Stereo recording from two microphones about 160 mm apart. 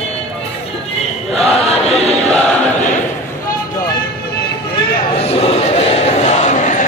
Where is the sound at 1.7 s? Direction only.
40° left (ahead or behind).